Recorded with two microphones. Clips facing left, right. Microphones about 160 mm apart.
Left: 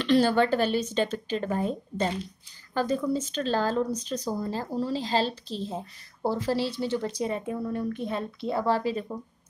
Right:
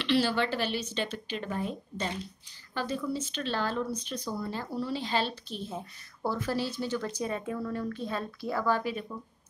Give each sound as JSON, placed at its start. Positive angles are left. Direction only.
{"t": 0.0, "sound": "speech", "side_deg": 45}